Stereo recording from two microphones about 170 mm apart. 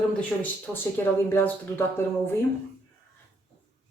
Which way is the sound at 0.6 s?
10° left (ahead or behind).